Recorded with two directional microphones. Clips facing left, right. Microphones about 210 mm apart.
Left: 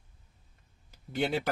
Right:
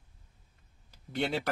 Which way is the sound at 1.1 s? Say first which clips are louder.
Left 2 dB; centre (ahead or behind).